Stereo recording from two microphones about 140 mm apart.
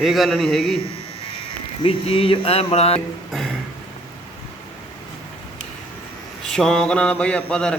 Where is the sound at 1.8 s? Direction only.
40° left (ahead or behind).